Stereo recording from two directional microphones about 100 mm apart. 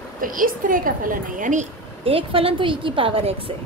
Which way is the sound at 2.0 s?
70° right (ahead or behind).